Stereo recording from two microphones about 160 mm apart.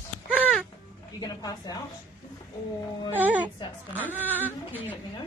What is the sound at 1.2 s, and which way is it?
Speech, 25° left (ahead or behind).